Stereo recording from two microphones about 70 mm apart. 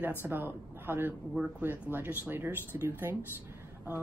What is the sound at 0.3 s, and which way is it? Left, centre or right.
A woman's voice, right.